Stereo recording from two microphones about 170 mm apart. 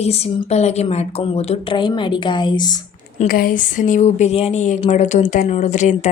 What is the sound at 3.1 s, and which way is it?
A woman's voice, 55° left (ahead or behind).